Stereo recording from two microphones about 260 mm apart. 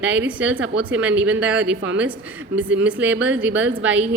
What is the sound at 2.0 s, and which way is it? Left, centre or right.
A woman's voice, centre.